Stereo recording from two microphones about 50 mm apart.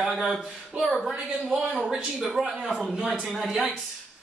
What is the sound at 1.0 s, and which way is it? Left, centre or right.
A man's voice, centre.